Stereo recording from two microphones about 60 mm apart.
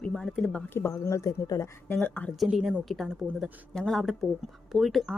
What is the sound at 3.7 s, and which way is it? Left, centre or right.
Speech, centre.